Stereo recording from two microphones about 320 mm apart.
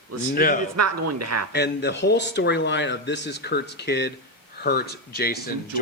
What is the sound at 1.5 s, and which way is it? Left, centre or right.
Speech, left.